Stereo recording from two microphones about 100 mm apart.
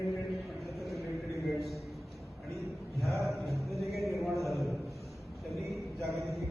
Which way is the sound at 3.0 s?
Centre (ahead or behind).